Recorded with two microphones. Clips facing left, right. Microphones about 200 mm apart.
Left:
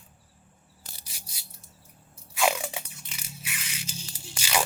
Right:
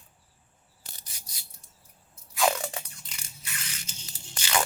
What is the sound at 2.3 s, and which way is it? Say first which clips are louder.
Biting: even; 5° left (ahead or behind).